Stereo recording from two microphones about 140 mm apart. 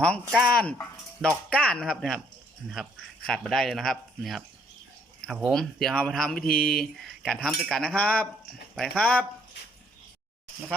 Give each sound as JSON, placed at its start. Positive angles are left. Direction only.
{"t": 0.0, "sound": "speech", "side_deg": 5}
{"t": 3.2, "sound": "speech", "side_deg": 5}
{"t": 6.5, "sound": "speech", "side_deg": 90}
{"t": 6.7, "sound": "speech", "side_deg": 5}